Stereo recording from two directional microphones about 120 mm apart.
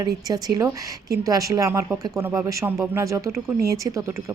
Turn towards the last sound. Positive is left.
turn(degrees=-25)  # may be behind; listen again after turning